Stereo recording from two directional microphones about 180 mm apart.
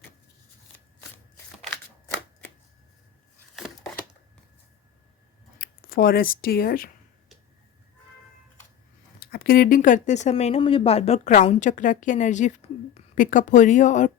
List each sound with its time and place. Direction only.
1.7 s shuffling cards: 10° left (ahead or behind)
5.5 s speech: 55° left (ahead or behind)
9.2 s speech: 55° left (ahead or behind)